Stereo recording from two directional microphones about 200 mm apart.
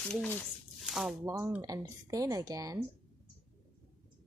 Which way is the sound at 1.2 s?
15° right (ahead or behind).